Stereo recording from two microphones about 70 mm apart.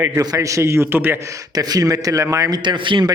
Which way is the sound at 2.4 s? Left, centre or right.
Right.